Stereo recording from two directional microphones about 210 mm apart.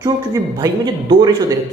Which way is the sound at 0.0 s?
15° right (ahead or behind).